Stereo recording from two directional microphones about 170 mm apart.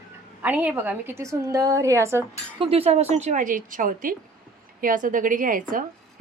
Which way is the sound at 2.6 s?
35° right (ahead or behind).